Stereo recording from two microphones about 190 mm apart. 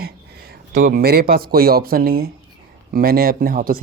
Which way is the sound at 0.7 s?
45° right (ahead or behind).